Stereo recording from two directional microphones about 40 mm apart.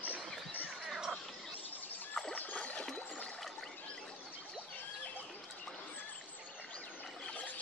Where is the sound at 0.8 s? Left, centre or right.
Centre.